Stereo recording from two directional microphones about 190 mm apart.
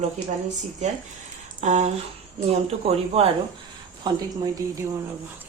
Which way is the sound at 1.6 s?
40° right (ahead or behind).